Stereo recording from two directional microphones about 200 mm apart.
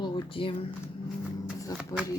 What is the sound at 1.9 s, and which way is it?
Speech, 15° left (ahead or behind).